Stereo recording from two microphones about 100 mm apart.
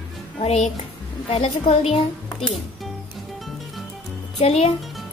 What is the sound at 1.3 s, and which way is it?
Speech, 75° left (ahead or behind).